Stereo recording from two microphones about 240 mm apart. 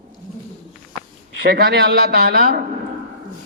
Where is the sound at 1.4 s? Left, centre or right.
Right.